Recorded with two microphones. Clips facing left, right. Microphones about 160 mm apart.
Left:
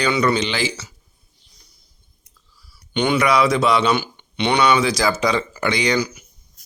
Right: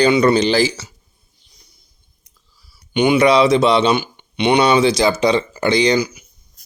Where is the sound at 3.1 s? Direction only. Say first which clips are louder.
Right 5 dB; 25° right (ahead or behind).